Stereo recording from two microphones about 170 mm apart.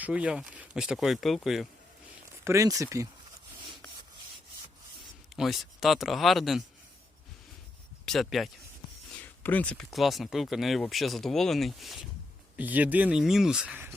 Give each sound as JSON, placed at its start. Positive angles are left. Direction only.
{"t": 0.0, "sound": "speech", "side_deg": -5}
{"t": 2.4, "sound": "speech", "side_deg": -15}
{"t": 5.4, "sound": "speech", "side_deg": 0}
{"t": 8.0, "sound": "speech", "side_deg": 0}